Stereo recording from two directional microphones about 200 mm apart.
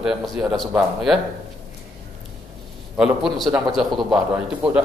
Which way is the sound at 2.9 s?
Centre (ahead or behind).